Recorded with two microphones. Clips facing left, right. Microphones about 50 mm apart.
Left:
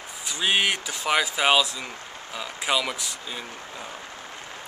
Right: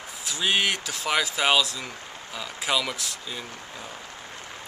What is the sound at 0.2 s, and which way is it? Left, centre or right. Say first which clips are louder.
Speech: left 1 dB; centre.